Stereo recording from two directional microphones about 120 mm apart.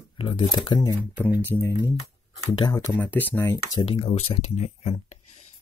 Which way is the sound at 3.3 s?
25° left (ahead or behind).